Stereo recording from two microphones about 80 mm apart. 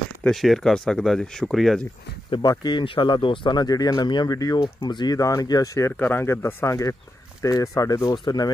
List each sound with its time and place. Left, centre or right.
0.3 s speech: centre
2.4 s speech: left
4.4 s speech: left
5.9 s speech: left